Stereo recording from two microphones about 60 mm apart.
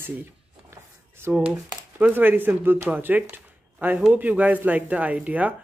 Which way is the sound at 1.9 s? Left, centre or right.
Right.